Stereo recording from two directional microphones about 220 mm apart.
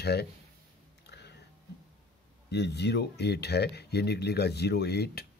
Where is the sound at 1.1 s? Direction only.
50° left (ahead or behind).